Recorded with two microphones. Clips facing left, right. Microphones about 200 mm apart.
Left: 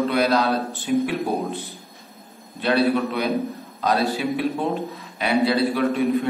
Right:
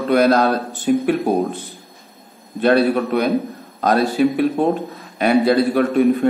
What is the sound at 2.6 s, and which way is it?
A man's voice, 50° right (ahead or behind).